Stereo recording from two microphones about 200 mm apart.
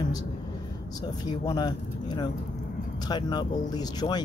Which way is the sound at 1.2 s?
20° left (ahead or behind).